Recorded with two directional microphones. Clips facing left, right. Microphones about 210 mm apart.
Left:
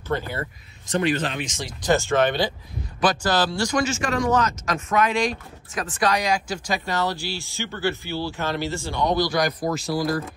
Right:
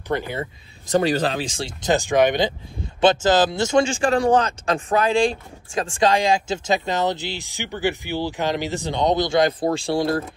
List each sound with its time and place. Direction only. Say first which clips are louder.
0.1 s speech: right 2 dB; 15° right (ahead or behind)
0.8 s speech: right 4 dB; 40° right (ahead or behind)
1.8 s speech: right 2 dB; 15° right (ahead or behind)